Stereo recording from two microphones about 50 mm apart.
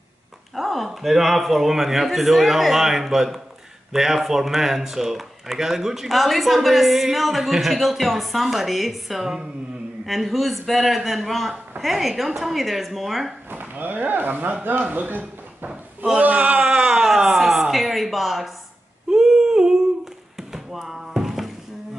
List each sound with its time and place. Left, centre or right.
0.6 s speech: centre
13.5 s speech: right
16.2 s speech: right
17.1 s a sound: centre